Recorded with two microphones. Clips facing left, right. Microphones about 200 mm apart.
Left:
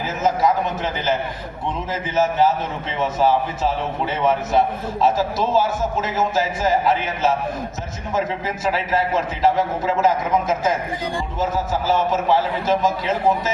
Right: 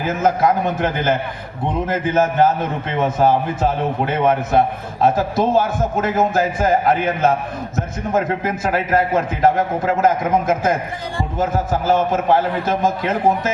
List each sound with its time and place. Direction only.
0.0 s a man's voice: 55° right (ahead or behind)